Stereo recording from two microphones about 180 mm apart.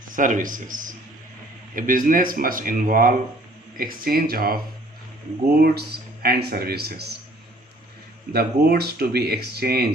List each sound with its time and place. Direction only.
0.1 s speech: 45° right (ahead or behind)
8.3 s speech: 60° right (ahead or behind)